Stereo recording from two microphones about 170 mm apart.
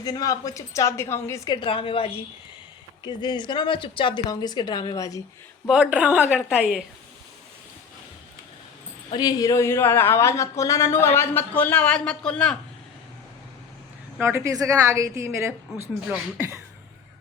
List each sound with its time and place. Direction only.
0.0 s a woman's voice: 20° left (ahead or behind)
1.5 s a woman's voice: 30° left (ahead or behind)
5.6 s a woman's voice: 5° right (ahead or behind)
9.0 s speech: 25° left (ahead or behind); by 12.5 s 5° left (ahead or behind)
14.2 s a woman's voice: 15° right (ahead or behind)